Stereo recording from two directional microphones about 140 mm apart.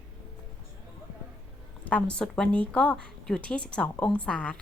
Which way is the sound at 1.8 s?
10° left (ahead or behind).